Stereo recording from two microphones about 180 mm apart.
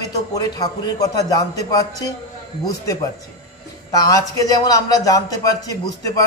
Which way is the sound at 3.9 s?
20° left (ahead or behind).